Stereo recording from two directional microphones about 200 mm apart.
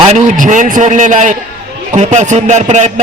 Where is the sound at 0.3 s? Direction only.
40° right (ahead or behind).